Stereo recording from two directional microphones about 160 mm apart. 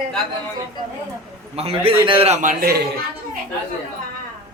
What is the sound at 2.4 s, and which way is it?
Speech, 60° right (ahead or behind).